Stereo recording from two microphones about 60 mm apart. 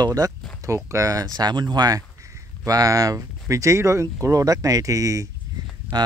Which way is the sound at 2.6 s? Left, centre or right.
Right.